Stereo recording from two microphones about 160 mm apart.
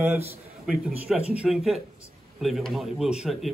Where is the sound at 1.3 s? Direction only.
5° right (ahead or behind).